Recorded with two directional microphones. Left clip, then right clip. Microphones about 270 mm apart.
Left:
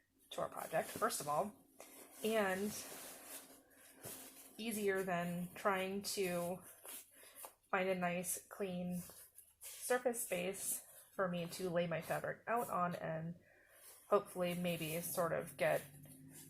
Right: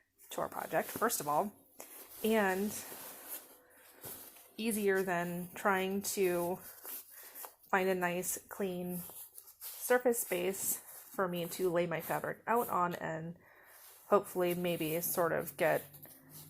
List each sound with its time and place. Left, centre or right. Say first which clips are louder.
0.3 s a woman's voice: right 5 dB; right
4.5 s a woman's voice: right 6 dB; right
7.7 s a woman's voice: right 6 dB; right
9.8 s a woman's voice: right 7 dB; right